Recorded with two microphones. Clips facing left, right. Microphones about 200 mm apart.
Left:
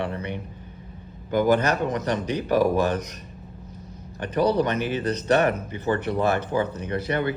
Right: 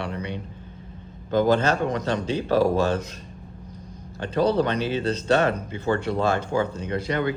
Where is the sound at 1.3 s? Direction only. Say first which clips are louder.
Even; 15° left (ahead or behind).